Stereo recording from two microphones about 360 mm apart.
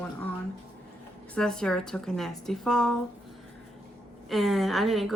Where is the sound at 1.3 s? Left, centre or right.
Centre.